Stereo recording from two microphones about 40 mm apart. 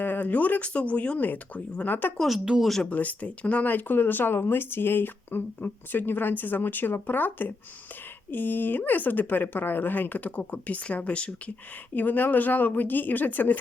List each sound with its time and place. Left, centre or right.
0.0 s speech: left
1.2 s speech: left
2.2 s speech: centre
2.9 s speech: left
3.7 s speech: left
11.9 s speech: left